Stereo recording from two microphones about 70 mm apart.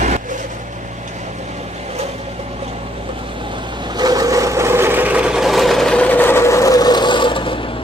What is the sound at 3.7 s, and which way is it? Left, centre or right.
Sewing machine, right.